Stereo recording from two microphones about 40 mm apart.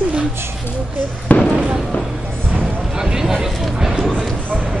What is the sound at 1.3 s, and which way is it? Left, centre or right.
Speech, left.